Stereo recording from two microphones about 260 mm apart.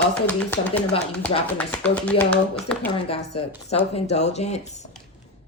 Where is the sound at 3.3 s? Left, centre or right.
Left.